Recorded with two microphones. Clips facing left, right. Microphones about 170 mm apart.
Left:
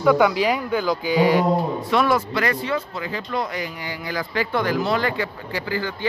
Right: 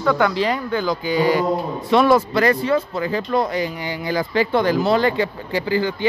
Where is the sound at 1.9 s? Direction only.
30° right (ahead or behind).